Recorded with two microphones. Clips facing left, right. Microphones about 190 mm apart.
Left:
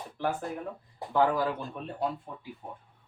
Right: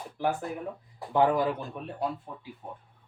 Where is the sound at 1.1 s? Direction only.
20° right (ahead or behind).